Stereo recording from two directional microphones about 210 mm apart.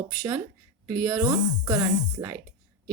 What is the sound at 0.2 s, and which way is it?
Speech, 10° right (ahead or behind).